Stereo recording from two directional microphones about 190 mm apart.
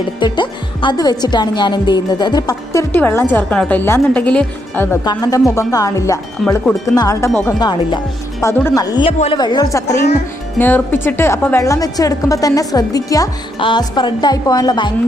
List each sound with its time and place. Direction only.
0.2 s a woman's voice: 25° left (ahead or behind)
6.4 s wind chime: centre (ahead or behind)
6.8 s a woman's voice: 20° left (ahead or behind)
9.1 s a woman's voice: 35° left (ahead or behind)
9.4 s a woman's voice: 20° left (ahead or behind)